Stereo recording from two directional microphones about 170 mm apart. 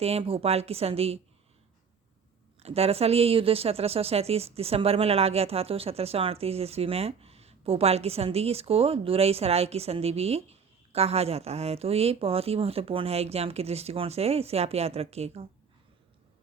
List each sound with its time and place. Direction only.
0.0 s speech: 35° right (ahead or behind)
2.6 s speech: 35° right (ahead or behind)